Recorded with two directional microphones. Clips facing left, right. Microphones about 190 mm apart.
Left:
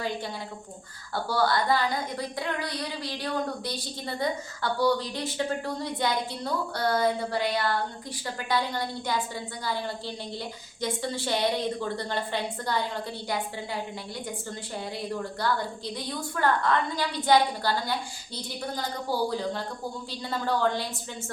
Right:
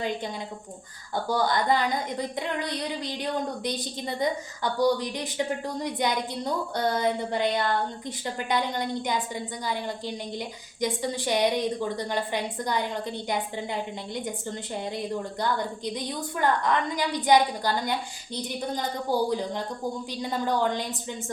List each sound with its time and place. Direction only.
1.1 s a woman's voice: 20° right (ahead or behind)
14.9 s a woman's voice: 20° right (ahead or behind)